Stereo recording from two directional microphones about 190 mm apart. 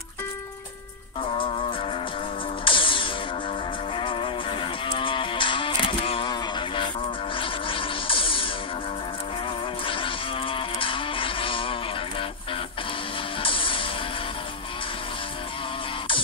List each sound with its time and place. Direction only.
2.6 s music: 25° left (ahead or behind)
4.0 s guitar: 25° left (ahead or behind)
7.3 s music: 25° left (ahead or behind)
9.8 s music: 25° left (ahead or behind)
13.4 s music: 25° left (ahead or behind)